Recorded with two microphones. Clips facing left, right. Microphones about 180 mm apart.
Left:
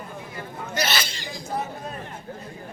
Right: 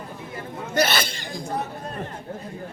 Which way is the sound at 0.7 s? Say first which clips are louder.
Right 5 dB; 55° right (ahead or behind).